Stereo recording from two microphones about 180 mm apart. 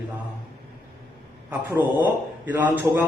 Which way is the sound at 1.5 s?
10° right (ahead or behind).